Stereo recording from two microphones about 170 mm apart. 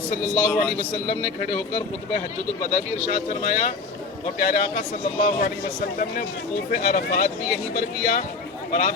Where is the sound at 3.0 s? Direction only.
45° left (ahead or behind).